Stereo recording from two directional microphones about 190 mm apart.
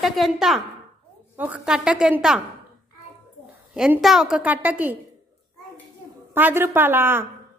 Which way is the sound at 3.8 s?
Centre (ahead or behind).